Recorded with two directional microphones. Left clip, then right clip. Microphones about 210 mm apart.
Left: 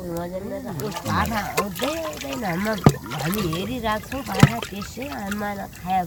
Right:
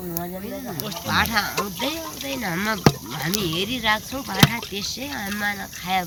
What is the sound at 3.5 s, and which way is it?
Speech, 30° left (ahead or behind).